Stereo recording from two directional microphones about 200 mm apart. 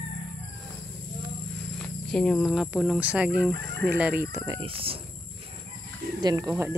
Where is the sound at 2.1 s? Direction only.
5° left (ahead or behind).